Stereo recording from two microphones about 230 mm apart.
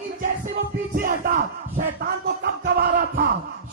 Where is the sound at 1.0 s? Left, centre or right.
Right.